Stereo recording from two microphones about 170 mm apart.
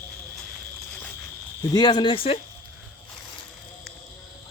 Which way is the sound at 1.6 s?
25° left (ahead or behind).